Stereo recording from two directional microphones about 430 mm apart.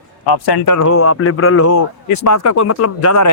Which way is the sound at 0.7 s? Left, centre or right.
Left.